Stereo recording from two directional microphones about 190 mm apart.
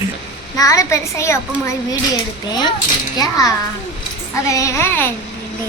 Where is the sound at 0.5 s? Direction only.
20° left (ahead or behind).